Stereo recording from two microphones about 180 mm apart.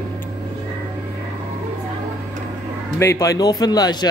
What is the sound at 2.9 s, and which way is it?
Speech, 15° left (ahead or behind).